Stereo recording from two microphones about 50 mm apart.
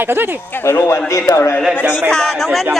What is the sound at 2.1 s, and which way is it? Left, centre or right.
Speech, centre.